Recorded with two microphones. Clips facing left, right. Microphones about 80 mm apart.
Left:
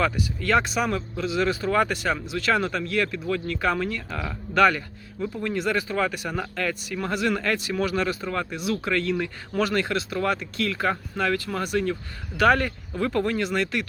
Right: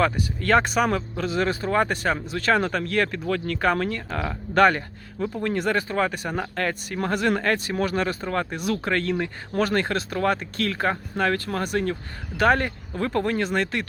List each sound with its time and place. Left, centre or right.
0.0 s speech: right
12.4 s speech: right